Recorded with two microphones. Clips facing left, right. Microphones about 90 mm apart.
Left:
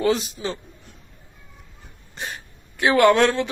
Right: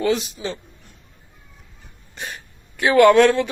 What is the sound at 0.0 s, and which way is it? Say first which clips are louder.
Speech: even; 35° left (ahead or behind).